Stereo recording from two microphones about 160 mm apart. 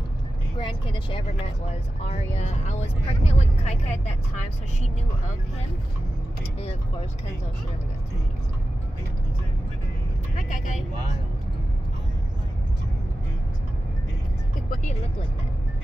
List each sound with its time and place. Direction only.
0.6 s speech: 30° left (ahead or behind)
10.3 s speech: 55° left (ahead or behind)